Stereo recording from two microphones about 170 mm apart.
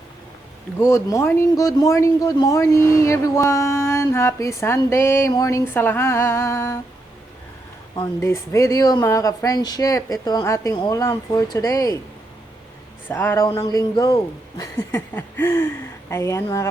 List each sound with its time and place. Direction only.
0.8 s speech: 15° left (ahead or behind)
8.2 s speech: 15° left (ahead or behind)
13.1 s speech: 15° left (ahead or behind)